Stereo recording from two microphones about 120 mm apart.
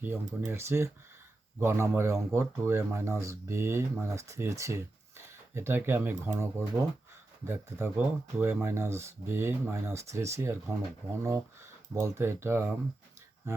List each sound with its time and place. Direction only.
0.0 s speech: 15° right (ahead or behind)